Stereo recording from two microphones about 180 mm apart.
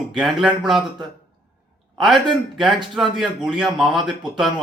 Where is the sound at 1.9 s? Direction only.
Centre (ahead or behind).